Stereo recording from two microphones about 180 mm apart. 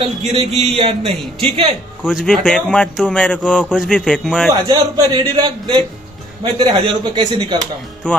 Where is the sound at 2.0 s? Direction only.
Centre (ahead or behind).